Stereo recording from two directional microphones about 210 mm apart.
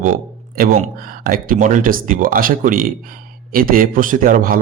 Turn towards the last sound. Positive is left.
turn(degrees=-40)  # may be behind; listen again after turning